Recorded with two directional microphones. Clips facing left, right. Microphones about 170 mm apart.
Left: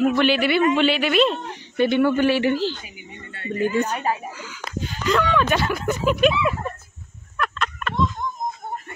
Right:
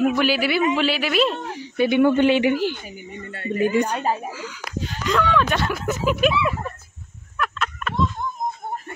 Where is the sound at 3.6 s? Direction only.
15° right (ahead or behind).